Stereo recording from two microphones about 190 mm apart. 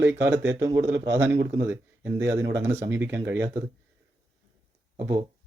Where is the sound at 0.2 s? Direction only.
15° right (ahead or behind).